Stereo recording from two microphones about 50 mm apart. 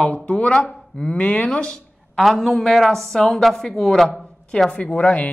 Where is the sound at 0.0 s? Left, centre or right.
Left.